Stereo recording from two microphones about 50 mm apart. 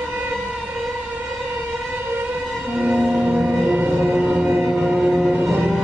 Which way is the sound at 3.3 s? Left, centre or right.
Right.